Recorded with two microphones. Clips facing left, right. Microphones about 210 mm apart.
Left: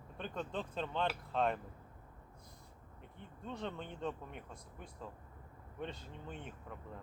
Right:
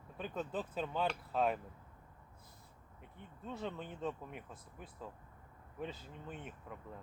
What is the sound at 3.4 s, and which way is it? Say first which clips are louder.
Speech: even; 5° right (ahead or behind).